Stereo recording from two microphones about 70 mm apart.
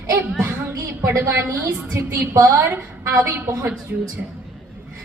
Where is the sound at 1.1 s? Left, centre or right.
Right.